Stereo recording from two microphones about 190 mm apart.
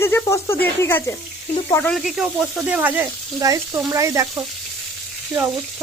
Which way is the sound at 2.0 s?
Centre (ahead or behind).